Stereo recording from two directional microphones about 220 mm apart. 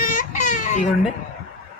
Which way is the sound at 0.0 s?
40° left (ahead or behind).